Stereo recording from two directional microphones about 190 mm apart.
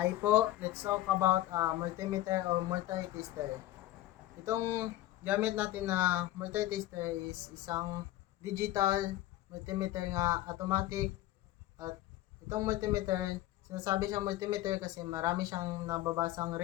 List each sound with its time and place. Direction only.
0.0 s speech: 10° right (ahead or behind)
4.4 s speech: 15° right (ahead or behind)
12.5 s speech: 15° right (ahead or behind)